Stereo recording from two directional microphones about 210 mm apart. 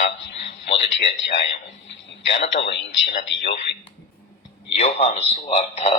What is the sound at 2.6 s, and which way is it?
Speech, 55° left (ahead or behind).